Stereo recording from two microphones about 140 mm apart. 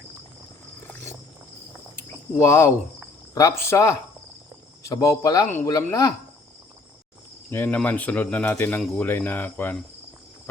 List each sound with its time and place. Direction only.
2.0 s cricket: 20° left (ahead or behind)
3.3 s speech: 20° left (ahead or behind)
7.5 s speech: 15° left (ahead or behind)